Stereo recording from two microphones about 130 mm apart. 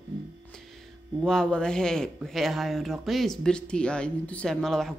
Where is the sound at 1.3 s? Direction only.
5° left (ahead or behind).